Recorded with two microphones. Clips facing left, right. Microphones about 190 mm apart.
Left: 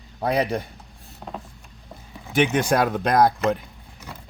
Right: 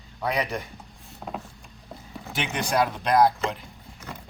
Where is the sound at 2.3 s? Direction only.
50° left (ahead or behind).